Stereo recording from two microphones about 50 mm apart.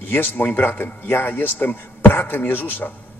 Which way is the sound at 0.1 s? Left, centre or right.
Left.